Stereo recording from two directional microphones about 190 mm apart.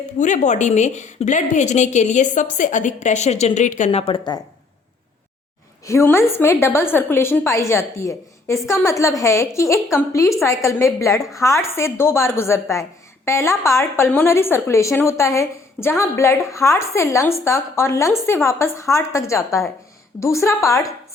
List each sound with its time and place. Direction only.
0.2 s a woman's voice: 40° left (ahead or behind); by 4.4 s 25° left (ahead or behind)
5.8 s a woman's voice: 15° left (ahead or behind)
11.1 s a woman's voice: centre (ahead or behind)
11.3 s a woman's voice: 15° left (ahead or behind)